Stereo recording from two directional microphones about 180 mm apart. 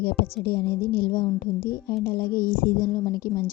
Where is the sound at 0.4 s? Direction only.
60° left (ahead or behind).